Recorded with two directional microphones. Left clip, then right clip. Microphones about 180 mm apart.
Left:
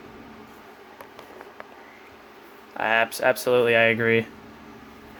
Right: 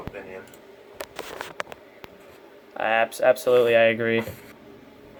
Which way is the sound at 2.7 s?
30° left (ahead or behind).